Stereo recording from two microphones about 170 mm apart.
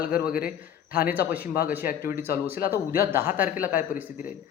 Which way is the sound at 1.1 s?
10° right (ahead or behind).